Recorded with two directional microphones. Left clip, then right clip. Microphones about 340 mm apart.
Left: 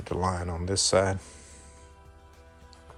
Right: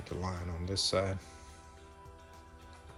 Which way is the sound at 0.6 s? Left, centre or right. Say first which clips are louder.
Left 8 dB; centre.